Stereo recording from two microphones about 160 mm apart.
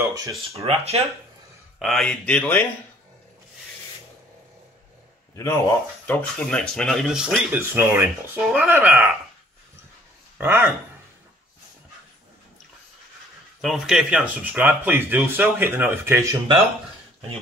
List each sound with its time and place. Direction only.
0.5 s speech: 40° right (ahead or behind)
1.8 s speech: centre (ahead or behind)
5.3 s speech: 20° left (ahead or behind); by 7.3 s 5° right (ahead or behind)
7.5 s speech: 15° right (ahead or behind)
10.3 s speech: 10° right (ahead or behind)
13.6 s speech: centre (ahead or behind); by 16.3 s 15° right (ahead or behind)